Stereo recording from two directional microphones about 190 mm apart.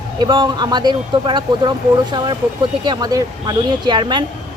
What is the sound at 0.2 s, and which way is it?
Speech, 25° right (ahead or behind).